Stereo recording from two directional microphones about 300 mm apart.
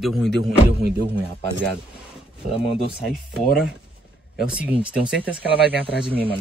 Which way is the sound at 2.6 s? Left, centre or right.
Centre.